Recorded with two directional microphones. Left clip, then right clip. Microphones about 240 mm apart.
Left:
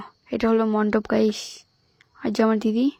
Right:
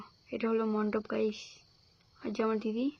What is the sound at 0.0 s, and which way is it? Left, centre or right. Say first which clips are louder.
Speech: left 11 dB; left.